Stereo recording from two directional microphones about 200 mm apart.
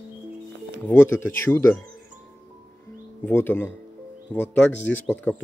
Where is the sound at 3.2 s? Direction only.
10° left (ahead or behind).